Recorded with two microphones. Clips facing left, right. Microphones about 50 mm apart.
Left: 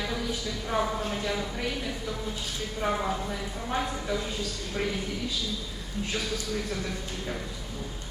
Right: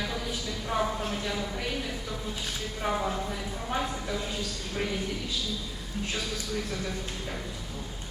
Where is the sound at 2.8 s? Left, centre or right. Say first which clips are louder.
Left 1 dB; centre.